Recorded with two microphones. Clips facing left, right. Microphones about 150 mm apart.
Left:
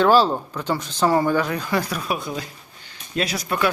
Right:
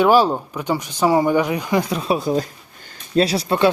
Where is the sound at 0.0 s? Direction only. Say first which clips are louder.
Right 2 dB; 15° right (ahead or behind); by 3.2 s 45° right (ahead or behind).